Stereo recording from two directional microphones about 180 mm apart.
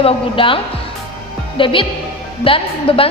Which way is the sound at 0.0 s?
30° left (ahead or behind).